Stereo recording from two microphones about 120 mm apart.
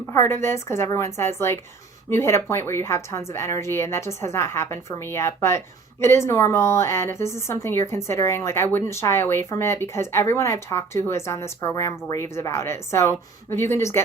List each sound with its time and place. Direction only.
0.1 s a woman's voice: 20° left (ahead or behind)